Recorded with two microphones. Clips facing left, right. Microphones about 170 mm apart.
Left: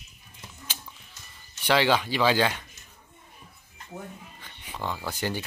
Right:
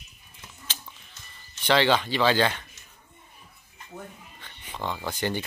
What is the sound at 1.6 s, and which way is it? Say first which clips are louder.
Speech: right 1 dB; 10° left (ahead or behind).